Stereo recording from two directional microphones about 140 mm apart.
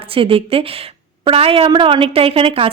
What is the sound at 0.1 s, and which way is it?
A woman's voice, 40° right (ahead or behind).